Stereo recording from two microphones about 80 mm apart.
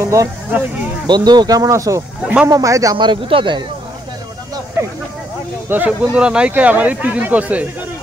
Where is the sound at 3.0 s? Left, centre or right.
Right.